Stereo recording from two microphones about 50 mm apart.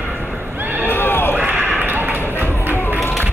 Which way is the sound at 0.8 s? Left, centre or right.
Left.